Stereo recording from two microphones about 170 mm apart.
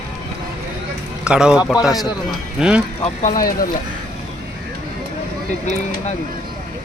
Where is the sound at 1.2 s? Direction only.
5° right (ahead or behind).